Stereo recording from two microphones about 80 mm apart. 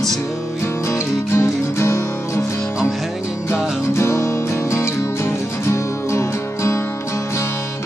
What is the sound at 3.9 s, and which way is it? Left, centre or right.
Music, left.